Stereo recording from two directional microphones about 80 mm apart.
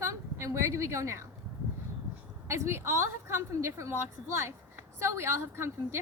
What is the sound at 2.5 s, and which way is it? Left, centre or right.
A woman's voice, right.